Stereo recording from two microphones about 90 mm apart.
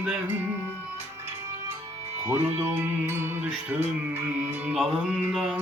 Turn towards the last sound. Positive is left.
turn(degrees=-5)  # may be behind; listen again after turning